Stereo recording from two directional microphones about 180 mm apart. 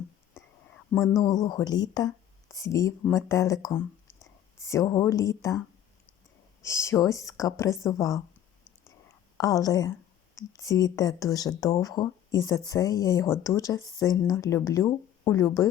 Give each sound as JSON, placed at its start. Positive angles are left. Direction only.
{"t": 1.1, "sound": "speech", "side_deg": 20}
{"t": 6.6, "sound": "speech", "side_deg": 15}
{"t": 9.4, "sound": "speech", "side_deg": 20}